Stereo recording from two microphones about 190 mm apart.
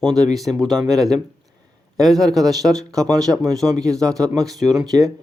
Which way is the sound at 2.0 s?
Centre (ahead or behind).